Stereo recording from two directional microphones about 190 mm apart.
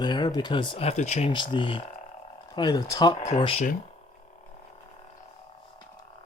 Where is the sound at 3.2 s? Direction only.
35° left (ahead or behind).